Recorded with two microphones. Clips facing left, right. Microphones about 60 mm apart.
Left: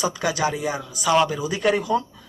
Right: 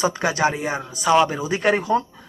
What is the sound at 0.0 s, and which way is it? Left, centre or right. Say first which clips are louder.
Speech: right 3 dB; right.